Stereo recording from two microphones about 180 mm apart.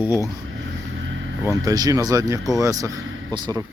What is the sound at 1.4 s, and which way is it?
Speech, 20° right (ahead or behind).